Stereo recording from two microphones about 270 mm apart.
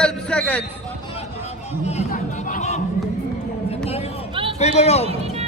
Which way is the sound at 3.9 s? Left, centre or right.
Left.